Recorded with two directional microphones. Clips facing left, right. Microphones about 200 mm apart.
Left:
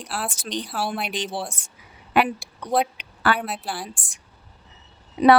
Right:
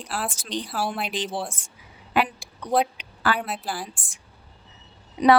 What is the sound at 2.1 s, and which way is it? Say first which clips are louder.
Speech: left 3 dB; 70° left (ahead or behind).